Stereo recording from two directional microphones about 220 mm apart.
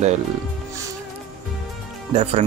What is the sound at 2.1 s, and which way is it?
Speech, 30° right (ahead or behind).